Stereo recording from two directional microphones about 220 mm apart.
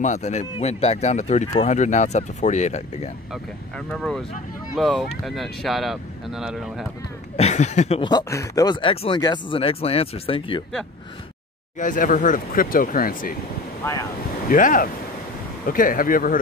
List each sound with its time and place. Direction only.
0.0 s speech: 30° left (ahead or behind)
3.7 s speech: 5° left (ahead or behind)
7.3 s speech: 30° left (ahead or behind)
11.8 s speech: 35° left (ahead or behind)
14.5 s speech: 40° left (ahead or behind)